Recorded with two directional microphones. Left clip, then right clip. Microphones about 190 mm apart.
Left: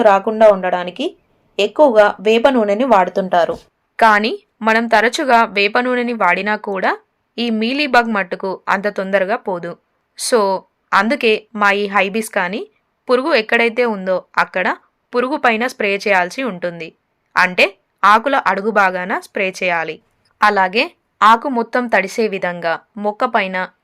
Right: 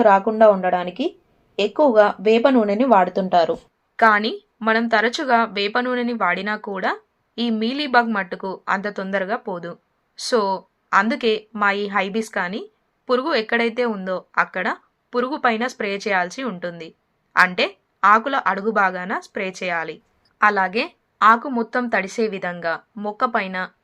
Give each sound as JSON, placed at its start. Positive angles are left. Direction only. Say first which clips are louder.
{"t": 0.0, "sound": "speech", "louder": "left 3 dB", "side_deg": 25}
{"t": 3.9, "sound": "a woman's voice", "louder": "left 4 dB", "side_deg": 40}